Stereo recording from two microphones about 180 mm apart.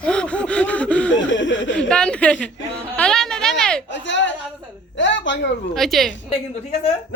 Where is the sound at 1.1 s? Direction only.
90° left.